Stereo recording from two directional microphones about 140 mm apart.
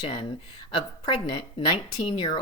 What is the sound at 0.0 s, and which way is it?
A woman's voice, 35° left (ahead or behind).